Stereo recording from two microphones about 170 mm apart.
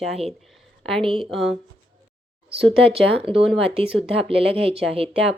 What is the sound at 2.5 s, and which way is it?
Speech, 35° right (ahead or behind).